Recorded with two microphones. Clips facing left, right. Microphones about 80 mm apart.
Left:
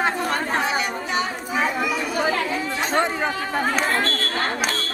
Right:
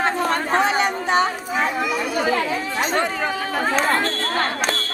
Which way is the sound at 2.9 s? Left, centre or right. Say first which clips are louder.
Left 2 dB; centre.